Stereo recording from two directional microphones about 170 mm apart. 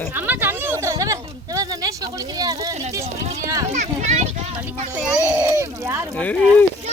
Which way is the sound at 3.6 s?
45° right (ahead or behind).